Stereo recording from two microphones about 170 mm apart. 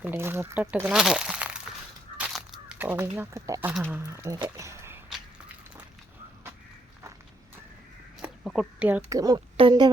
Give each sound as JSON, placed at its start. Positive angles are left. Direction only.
{"t": 0.0, "sound": "speech", "side_deg": -15}
{"t": 2.1, "sound": "a sound", "side_deg": -5}
{"t": 3.9, "sound": "speech", "side_deg": -15}
{"t": 8.4, "sound": "speech", "side_deg": -5}
{"t": 9.0, "sound": "speech", "side_deg": -20}